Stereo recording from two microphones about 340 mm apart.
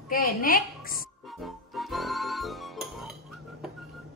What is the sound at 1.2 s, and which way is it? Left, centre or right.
Music, centre.